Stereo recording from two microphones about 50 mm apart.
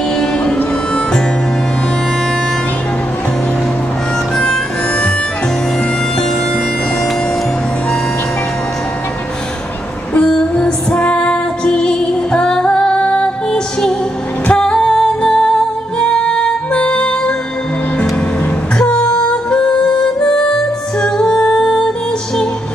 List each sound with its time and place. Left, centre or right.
0.2 s music: centre
4.4 s music: centre
10.5 s music: left
14.5 s music: centre
18.8 s music: centre